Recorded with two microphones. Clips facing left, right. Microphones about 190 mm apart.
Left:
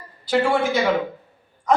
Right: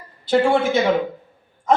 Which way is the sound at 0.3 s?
25° right (ahead or behind).